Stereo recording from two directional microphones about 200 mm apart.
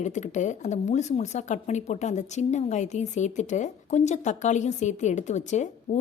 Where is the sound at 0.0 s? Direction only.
35° left (ahead or behind).